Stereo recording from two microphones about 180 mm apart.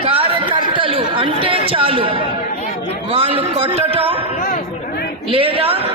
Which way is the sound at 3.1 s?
30° right (ahead or behind).